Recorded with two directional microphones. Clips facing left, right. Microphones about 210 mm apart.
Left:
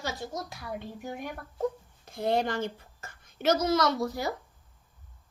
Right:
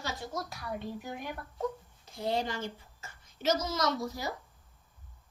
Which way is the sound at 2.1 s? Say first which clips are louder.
Left 5 dB; 55° left (ahead or behind).